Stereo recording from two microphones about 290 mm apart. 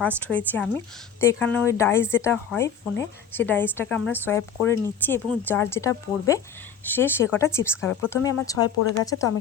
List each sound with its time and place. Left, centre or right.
0.2 s a woman's voice: centre